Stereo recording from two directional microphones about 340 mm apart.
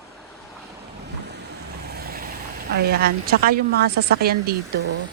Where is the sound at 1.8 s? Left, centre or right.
Right.